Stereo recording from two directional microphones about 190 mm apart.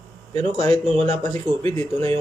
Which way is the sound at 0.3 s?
30° right (ahead or behind).